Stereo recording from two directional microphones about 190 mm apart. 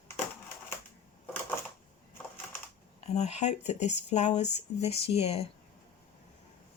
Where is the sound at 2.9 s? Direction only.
35° left (ahead or behind).